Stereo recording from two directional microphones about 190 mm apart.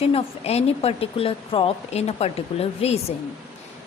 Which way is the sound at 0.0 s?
30° left (ahead or behind).